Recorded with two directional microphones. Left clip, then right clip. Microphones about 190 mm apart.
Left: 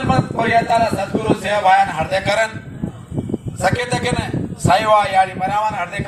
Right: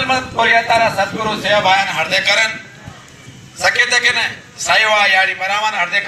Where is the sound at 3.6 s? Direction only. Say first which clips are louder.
Right 6 dB; 65° left (ahead or behind).